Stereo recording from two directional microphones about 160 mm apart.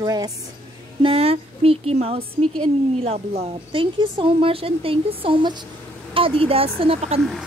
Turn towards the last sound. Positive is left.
turn(degrees=-35)  # may be behind; listen again after turning